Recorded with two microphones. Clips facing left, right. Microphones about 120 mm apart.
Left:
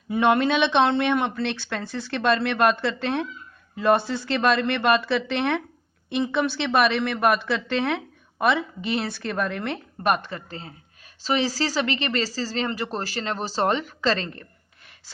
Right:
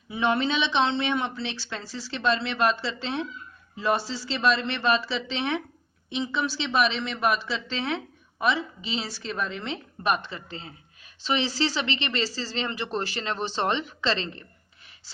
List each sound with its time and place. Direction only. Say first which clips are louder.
0.1 s a woman's voice: left 5 dB; 60° left (ahead or behind)